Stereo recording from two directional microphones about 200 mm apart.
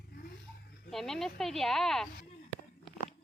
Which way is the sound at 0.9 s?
Centre (ahead or behind).